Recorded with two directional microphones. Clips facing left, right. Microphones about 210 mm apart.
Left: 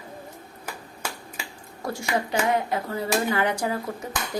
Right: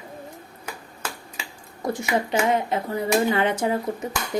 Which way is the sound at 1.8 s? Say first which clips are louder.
Right 3 dB; 20° right (ahead or behind).